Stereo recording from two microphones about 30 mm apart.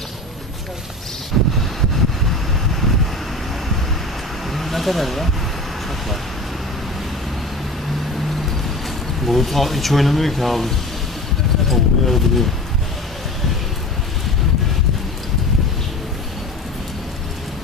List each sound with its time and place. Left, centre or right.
1.3 s wind: centre
4.5 s vehicle: centre
8.4 s vehicle: centre
9.2 s speech: centre
11.7 s speech: centre